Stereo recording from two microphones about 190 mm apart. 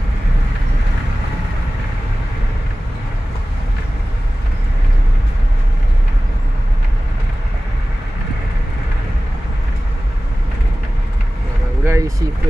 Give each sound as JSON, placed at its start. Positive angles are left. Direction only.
{"t": 11.8, "sound": "vehicle", "side_deg": -15}